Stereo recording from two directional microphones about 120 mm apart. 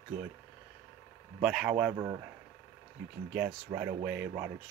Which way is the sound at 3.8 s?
15° right (ahead or behind).